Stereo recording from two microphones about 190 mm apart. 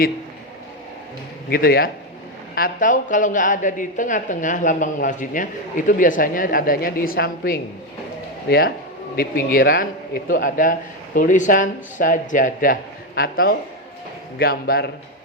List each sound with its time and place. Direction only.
1.5 s a woman's voice: 50° left (ahead or behind)